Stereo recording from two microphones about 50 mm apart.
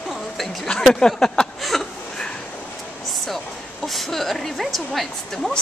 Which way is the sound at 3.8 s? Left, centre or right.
Centre.